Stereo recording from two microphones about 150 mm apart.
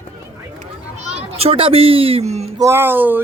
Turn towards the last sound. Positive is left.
turn(degrees=-15)  # may be behind; listen again after turning